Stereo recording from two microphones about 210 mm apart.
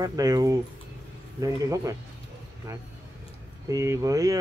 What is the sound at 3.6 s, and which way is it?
Speech, 15° right (ahead or behind).